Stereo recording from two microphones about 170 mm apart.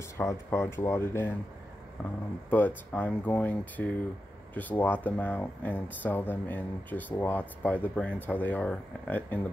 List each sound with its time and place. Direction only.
0.2 s speech: 15° left (ahead or behind)
2.5 s speech: 10° left (ahead or behind)